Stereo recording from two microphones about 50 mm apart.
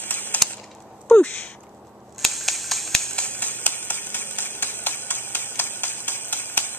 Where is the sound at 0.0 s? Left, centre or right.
Left.